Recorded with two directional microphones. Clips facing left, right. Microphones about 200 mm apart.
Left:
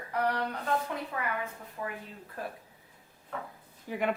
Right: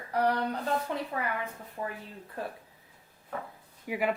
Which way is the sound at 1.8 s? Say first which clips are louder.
Right 2 dB; 35° right (ahead or behind).